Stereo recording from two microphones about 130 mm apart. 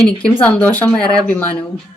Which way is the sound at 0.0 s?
10° left (ahead or behind).